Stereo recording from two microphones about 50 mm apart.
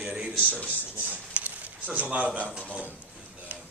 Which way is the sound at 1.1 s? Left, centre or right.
Right.